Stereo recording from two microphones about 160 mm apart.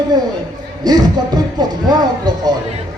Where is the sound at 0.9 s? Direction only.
25° right (ahead or behind).